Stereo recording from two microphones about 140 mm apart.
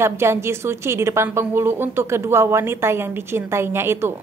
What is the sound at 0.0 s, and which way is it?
A woman's voice, 20° right (ahead or behind).